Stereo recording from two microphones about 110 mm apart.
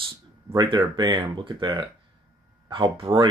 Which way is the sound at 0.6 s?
40° right (ahead or behind).